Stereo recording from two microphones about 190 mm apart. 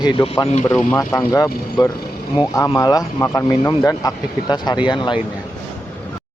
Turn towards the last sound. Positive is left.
turn(degrees=25)  # may be behind; listen again after turning